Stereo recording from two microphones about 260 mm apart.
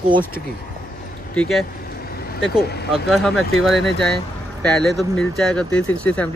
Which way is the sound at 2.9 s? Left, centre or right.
Centre.